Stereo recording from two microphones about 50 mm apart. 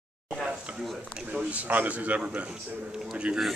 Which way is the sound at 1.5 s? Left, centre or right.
Right.